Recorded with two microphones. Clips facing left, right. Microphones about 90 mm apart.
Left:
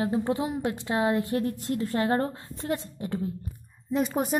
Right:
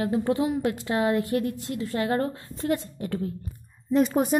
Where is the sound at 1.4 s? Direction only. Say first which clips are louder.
Left 1 dB; 45° left (ahead or behind); by 3.3 s 25° left (ahead or behind).